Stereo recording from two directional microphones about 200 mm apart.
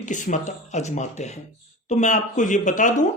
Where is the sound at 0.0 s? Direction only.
40° left (ahead or behind).